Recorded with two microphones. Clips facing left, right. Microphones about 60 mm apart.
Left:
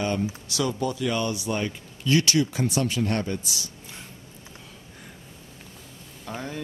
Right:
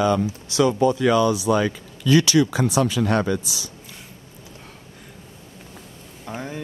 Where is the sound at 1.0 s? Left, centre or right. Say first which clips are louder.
Right 8 dB; right.